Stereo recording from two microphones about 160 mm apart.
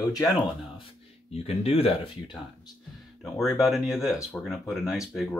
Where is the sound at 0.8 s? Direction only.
40° left (ahead or behind).